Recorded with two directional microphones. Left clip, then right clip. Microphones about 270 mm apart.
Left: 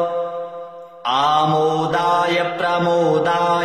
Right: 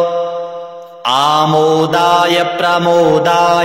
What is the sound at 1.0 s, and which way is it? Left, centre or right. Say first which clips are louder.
Mantra: right 5 dB; right.